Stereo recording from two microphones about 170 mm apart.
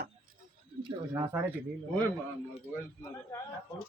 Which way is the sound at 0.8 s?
30° right (ahead or behind).